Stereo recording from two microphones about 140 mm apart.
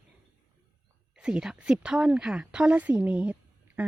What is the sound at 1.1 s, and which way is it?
A woman's voice, 5° right (ahead or behind).